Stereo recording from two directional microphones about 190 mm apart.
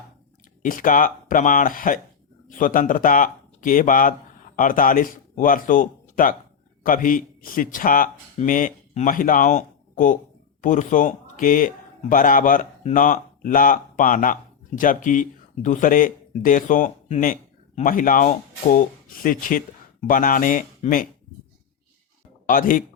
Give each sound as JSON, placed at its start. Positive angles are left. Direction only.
{"t": 0.6, "sound": "a man's voice", "side_deg": 45}
{"t": 22.4, "sound": "speech", "side_deg": 45}